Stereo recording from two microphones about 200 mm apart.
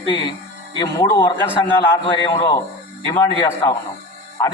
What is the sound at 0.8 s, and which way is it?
A man's voice, 20° left (ahead or behind).